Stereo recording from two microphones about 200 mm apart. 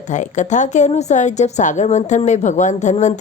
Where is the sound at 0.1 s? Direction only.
35° left (ahead or behind).